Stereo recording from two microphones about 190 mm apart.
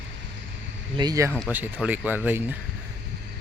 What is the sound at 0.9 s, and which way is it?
Speech, 20° right (ahead or behind).